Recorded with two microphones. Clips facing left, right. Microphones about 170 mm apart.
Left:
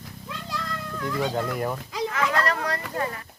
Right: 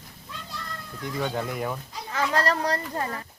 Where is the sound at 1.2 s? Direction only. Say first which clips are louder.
Left 1 dB; centre (ahead or behind).